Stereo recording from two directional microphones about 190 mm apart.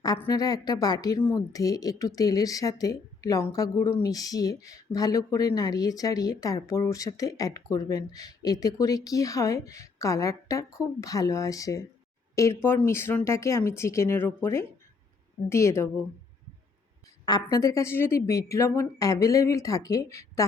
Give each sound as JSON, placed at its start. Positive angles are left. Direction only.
{"t": 0.0, "sound": "speech", "side_deg": 20}
{"t": 12.9, "sound": "a woman's voice", "side_deg": 10}
{"t": 17.4, "sound": "a woman's voice", "side_deg": 20}